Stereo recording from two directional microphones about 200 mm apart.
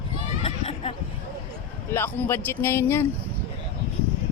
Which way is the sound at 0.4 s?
30° left (ahead or behind).